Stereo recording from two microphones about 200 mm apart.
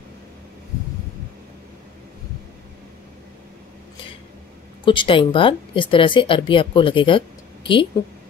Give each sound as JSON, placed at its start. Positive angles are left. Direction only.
{"t": 4.8, "sound": "speech", "side_deg": 25}